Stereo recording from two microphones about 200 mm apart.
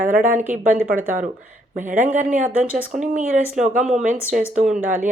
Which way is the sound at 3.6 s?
40° right (ahead or behind).